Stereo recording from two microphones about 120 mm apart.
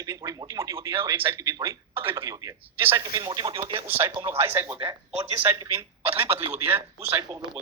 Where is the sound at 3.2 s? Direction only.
40° right (ahead or behind).